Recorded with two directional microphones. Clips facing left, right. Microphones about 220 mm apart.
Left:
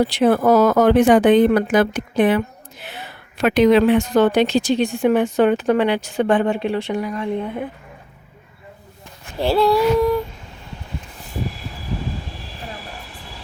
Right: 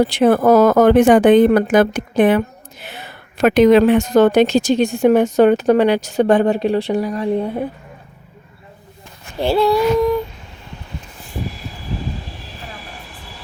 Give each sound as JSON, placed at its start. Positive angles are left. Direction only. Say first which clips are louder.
{"t": 0.0, "sound": "a woman's voice", "louder": "right 3 dB", "side_deg": -50}
{"t": 9.4, "sound": "female singing", "louder": "right 1 dB", "side_deg": 0}